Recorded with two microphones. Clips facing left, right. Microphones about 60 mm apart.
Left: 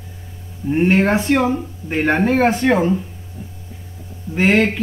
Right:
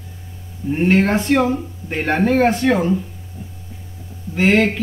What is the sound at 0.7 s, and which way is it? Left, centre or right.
Speech, centre.